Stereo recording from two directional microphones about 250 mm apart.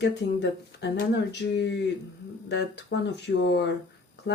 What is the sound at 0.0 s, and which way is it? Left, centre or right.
Speech, left.